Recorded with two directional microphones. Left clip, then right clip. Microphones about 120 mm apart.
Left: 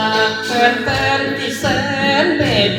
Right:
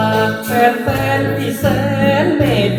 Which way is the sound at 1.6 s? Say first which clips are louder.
Right 1 dB; 25° right (ahead or behind).